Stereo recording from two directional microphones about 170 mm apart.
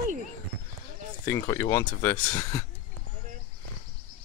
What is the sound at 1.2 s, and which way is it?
Speech, 15° left (ahead or behind).